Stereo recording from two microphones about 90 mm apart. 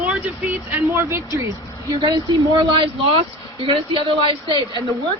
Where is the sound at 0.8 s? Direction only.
30° right (ahead or behind).